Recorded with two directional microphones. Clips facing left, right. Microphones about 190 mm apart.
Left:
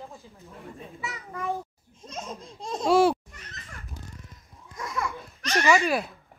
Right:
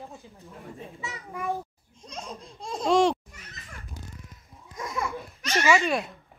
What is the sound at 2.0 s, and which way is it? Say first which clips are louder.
Laughter: left 2 dB; 5° left (ahead or behind).